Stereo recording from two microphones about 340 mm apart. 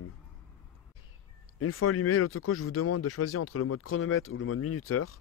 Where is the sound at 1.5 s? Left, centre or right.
Left.